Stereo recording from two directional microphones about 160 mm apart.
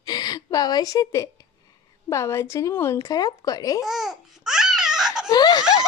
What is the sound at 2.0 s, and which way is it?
Speech, 15° left (ahead or behind).